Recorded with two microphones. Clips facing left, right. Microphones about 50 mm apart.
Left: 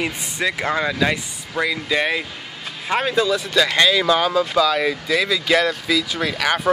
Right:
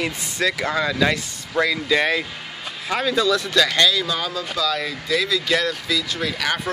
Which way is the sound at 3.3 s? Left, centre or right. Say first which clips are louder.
Even; centre.